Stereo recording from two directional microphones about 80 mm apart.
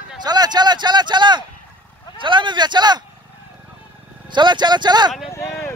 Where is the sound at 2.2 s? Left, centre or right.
Right.